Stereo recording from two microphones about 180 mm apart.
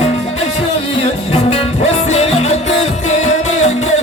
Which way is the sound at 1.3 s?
35° left (ahead or behind).